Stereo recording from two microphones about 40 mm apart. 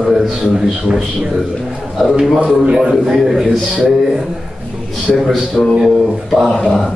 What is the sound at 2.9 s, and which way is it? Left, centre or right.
A man's voice, centre.